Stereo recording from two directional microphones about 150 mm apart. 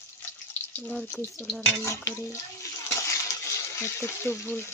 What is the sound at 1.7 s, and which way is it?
Speech, 15° left (ahead or behind).